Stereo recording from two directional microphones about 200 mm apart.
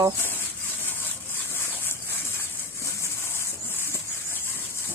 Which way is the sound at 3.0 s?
10° left (ahead or behind).